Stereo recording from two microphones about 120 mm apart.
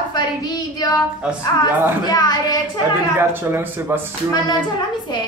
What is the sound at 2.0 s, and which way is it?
Speech, 35° left (ahead or behind).